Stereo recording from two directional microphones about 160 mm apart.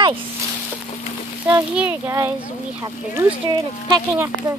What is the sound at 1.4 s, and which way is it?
Speech, 10° right (ahead or behind).